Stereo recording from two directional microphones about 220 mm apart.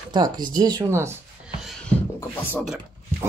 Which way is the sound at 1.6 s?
5° left (ahead or behind).